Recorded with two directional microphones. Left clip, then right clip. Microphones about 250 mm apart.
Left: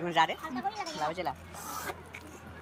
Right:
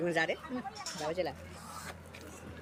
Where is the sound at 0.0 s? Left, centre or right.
Centre.